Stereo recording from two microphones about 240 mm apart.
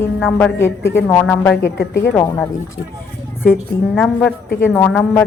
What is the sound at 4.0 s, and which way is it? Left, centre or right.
Speech, centre.